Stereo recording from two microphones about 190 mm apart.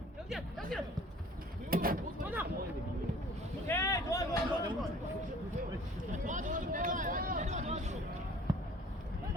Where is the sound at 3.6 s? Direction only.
15° left (ahead or behind).